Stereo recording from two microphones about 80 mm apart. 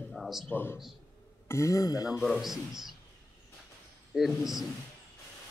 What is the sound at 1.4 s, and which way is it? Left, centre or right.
Speech, left.